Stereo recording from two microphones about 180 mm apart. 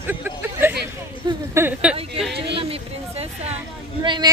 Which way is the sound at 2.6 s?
35° right (ahead or behind).